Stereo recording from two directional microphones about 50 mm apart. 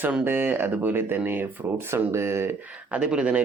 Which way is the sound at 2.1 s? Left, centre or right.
Right.